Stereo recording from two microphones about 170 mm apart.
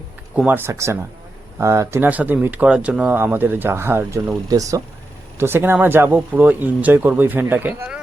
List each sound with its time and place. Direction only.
0.3 s speech: 10° right (ahead or behind)